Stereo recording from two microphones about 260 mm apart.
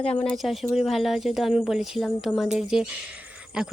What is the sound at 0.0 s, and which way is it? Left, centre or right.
Speech, centre.